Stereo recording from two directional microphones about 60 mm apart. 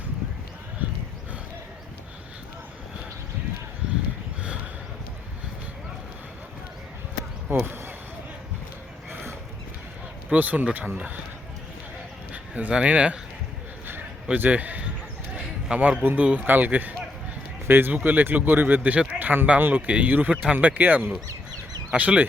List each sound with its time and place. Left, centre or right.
0.8 s a sound: right
7.6 s speech: right
10.2 s speech: right
12.3 s a sound: right
12.7 s speech: centre
14.3 s speech: right
15.4 s basketball bounce: centre
16.0 s speech: right
17.7 s speech: right